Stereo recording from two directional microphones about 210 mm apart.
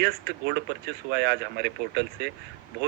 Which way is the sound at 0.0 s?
50° right (ahead or behind).